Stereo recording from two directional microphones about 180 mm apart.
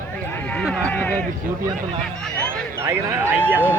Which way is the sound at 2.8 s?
15° right (ahead or behind).